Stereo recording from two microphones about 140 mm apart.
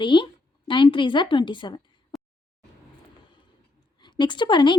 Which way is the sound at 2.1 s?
Centre (ahead or behind).